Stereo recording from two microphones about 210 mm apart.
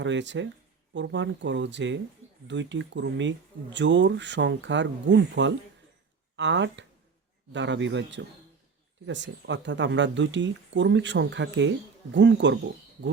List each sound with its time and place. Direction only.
0.0 s speech: 60° right (ahead or behind)